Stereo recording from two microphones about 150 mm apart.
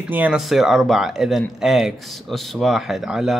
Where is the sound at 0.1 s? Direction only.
10° right (ahead or behind).